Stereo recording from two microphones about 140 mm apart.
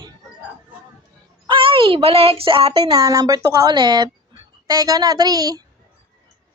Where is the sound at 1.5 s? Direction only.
40° right (ahead or behind).